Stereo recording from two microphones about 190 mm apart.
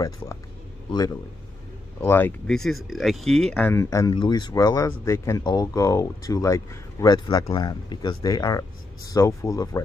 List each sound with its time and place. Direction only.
2.0 s speech: 10° left (ahead or behind)